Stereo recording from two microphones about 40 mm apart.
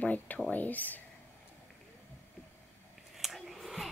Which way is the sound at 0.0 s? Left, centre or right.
Left.